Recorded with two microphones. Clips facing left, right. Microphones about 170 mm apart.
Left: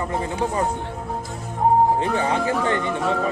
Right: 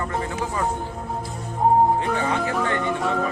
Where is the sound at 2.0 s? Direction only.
25° left (ahead or behind).